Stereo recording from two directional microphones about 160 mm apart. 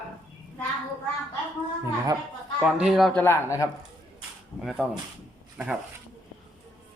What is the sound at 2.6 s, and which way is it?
A man's voice, 5° right (ahead or behind).